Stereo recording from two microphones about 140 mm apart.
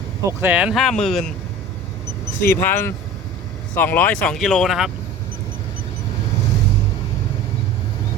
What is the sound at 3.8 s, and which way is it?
Speech, 15° left (ahead or behind).